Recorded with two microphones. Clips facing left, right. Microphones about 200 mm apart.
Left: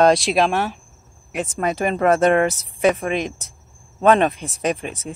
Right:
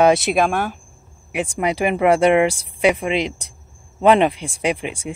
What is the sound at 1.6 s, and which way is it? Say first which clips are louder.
Speech: right 1 dB; 15° right (ahead or behind).